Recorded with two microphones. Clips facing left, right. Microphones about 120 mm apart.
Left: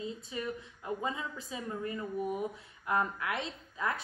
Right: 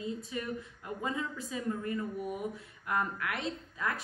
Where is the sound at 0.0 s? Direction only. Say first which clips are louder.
Right 1 dB; 25° left (ahead or behind).